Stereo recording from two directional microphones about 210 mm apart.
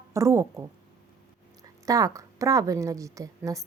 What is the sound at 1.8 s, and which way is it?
A woman's voice, 15° right (ahead or behind).